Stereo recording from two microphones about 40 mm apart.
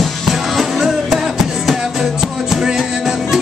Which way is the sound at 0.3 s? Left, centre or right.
Centre.